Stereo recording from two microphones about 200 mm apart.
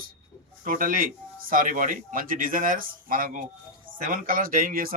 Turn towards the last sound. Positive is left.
turn(degrees=-45)  # may be behind; listen again after turning